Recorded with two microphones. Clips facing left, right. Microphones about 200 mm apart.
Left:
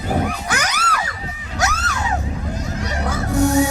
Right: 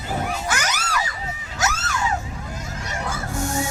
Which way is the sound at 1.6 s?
60° left (ahead or behind).